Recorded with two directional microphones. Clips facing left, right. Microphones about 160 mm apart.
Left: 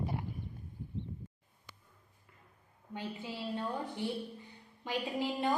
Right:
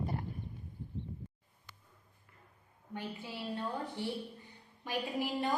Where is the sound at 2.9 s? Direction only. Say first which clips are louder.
Left 1 dB; 20° left (ahead or behind).